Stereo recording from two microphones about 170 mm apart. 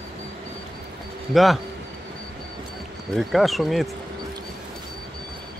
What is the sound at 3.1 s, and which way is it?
Speech, centre (ahead or behind).